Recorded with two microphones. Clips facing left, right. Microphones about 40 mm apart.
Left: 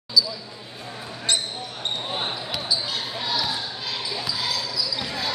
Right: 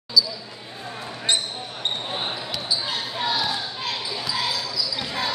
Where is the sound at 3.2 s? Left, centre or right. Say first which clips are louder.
Right 3 dB; right.